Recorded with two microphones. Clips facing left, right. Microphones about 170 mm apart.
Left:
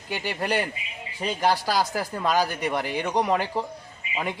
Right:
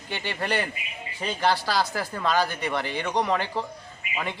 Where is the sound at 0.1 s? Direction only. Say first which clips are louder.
Left 2 dB; 10° left (ahead or behind).